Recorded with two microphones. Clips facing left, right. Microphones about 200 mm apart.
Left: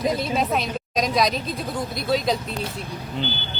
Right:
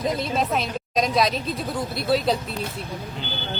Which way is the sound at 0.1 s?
Centre (ahead or behind).